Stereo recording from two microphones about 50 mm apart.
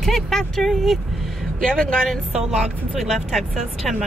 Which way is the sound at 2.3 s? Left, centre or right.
Centre.